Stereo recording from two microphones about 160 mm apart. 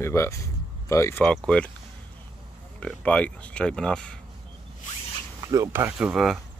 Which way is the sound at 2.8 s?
5° left (ahead or behind).